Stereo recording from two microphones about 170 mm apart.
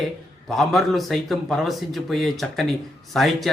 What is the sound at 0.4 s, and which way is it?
A man's voice, centre (ahead or behind).